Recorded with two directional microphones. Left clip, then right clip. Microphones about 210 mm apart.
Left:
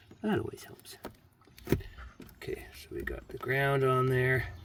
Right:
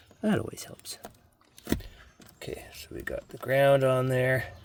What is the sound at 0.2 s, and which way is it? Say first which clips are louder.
Speech: right 3 dB; 45° right (ahead or behind).